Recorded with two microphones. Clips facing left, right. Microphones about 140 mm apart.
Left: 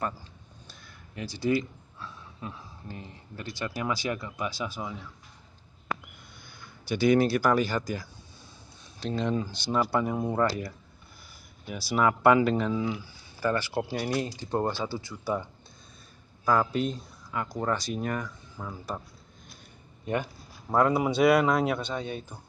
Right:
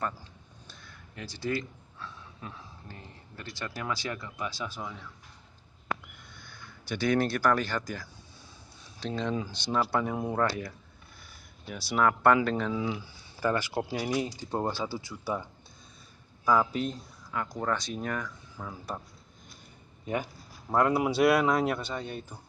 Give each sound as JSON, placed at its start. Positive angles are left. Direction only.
{"t": 0.7, "sound": "speech", "side_deg": 15}
{"t": 6.9, "sound": "a man's voice", "side_deg": 10}
{"t": 13.4, "sound": "speech", "side_deg": -15}
{"t": 16.4, "sound": "speech", "side_deg": 0}
{"t": 20.7, "sound": "a man's voice", "side_deg": -5}